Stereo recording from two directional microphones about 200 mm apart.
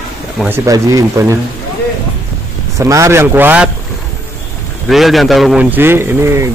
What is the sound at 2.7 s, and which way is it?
Speech, 15° right (ahead or behind).